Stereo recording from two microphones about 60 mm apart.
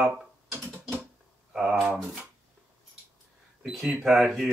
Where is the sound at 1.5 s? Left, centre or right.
Centre.